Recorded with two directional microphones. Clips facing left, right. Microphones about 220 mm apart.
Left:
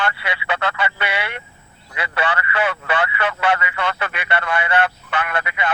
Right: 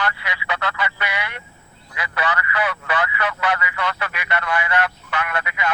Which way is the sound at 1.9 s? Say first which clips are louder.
Left 2 dB; 30° left (ahead or behind).